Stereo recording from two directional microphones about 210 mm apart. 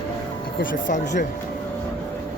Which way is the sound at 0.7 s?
35° left (ahead or behind).